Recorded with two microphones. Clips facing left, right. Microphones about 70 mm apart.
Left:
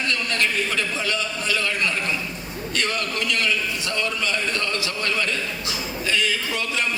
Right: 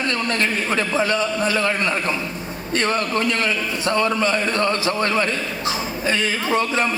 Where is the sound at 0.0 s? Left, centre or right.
Right.